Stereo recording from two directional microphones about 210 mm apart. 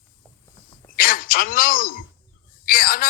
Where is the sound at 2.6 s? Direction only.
45° left (ahead or behind).